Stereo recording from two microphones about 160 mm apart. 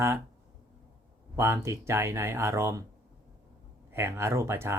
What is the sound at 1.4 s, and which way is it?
Speech, 15° right (ahead or behind).